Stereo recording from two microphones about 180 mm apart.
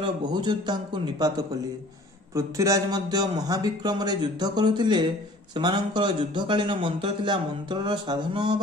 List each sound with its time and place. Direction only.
0.0 s a man's voice: 25° right (ahead or behind)
2.3 s a man's voice: 20° right (ahead or behind)